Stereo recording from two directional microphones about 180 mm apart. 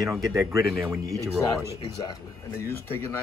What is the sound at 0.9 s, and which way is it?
Speech, 15° right (ahead or behind).